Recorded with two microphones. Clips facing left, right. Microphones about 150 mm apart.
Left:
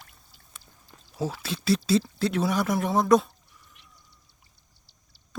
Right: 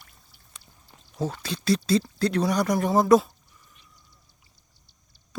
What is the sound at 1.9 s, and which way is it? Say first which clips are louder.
Speech: right 1 dB; 5° left (ahead or behind).